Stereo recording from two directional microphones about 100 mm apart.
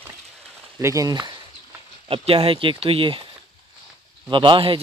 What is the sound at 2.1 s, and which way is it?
A man's voice, 65° right (ahead or behind).